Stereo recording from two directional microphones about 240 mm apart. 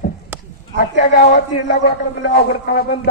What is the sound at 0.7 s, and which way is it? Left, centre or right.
A man's voice, left.